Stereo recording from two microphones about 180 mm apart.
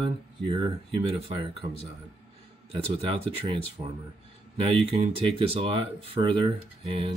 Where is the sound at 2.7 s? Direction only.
30° right (ahead or behind).